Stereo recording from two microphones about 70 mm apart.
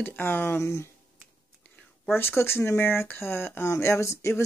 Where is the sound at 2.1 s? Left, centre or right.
Left.